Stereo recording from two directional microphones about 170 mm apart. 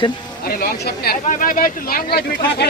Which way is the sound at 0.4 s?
60° left (ahead or behind).